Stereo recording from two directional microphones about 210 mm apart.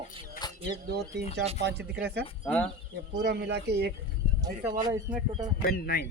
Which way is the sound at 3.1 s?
50° right (ahead or behind).